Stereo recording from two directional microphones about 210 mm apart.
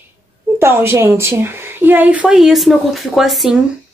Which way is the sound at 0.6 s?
10° right (ahead or behind).